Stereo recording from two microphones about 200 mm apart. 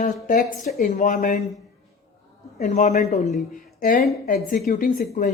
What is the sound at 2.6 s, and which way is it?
A woman's voice, 35° left (ahead or behind).